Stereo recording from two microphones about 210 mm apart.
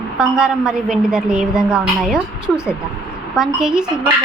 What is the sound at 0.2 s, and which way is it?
A woman's voice, 5° right (ahead or behind).